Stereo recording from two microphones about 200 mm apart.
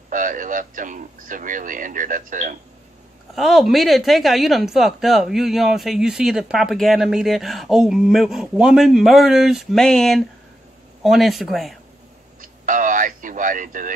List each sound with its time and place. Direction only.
0.1 s speech: 40° right (ahead or behind)
3.3 s speech: centre (ahead or behind)
12.4 s a sound: 40° right (ahead or behind)